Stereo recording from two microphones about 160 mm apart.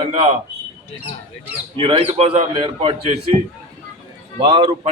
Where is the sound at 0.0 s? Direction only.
35° right (ahead or behind).